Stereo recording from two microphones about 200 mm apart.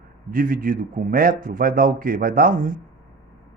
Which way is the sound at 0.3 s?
45° right (ahead or behind).